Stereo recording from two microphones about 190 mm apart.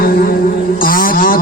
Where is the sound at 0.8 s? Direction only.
45° left (ahead or behind).